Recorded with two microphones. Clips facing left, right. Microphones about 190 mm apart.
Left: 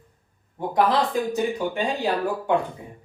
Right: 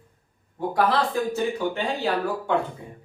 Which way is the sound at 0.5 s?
20° left (ahead or behind).